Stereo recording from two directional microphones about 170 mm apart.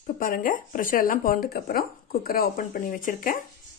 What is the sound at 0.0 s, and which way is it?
Speech, 55° left (ahead or behind).